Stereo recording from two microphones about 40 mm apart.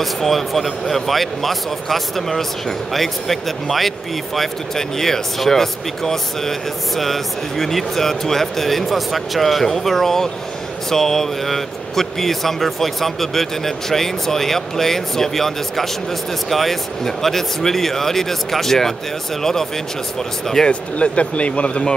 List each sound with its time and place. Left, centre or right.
0.0 s speech: centre
20.6 s speech: left